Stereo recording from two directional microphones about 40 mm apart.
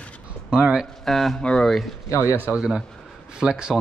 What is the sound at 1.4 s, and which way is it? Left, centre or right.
Speech, left.